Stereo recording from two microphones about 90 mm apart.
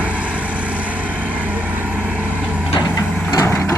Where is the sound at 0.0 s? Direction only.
15° right (ahead or behind).